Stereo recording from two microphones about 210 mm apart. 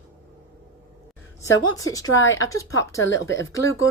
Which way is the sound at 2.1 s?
65° left (ahead or behind).